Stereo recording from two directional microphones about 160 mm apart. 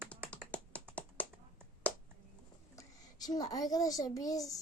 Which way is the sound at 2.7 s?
25° left (ahead or behind).